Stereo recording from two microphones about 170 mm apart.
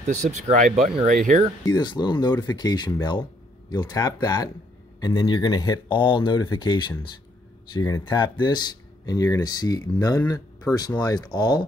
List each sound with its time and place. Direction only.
0.0 s speech: 45° right (ahead or behind)
1.7 s speech: 25° left (ahead or behind)